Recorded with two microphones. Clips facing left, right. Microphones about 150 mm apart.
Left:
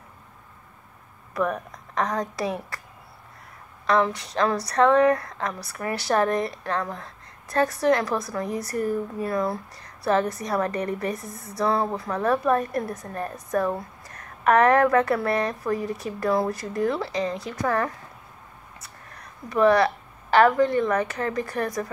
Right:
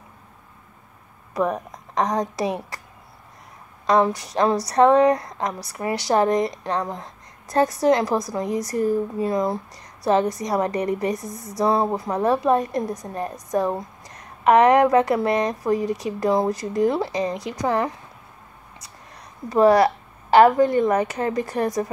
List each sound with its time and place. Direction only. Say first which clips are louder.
1.3 s a woman's voice: right 3 dB; 20° right (ahead or behind)
3.8 s a woman's voice: right 3 dB; 20° right (ahead or behind)
19.0 s a sound: right 6 dB; 30° right (ahead or behind)
20.3 s a woman's voice: right 4 dB; 25° right (ahead or behind)